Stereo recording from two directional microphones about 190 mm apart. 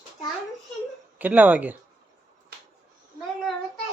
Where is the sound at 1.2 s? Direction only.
10° right (ahead or behind).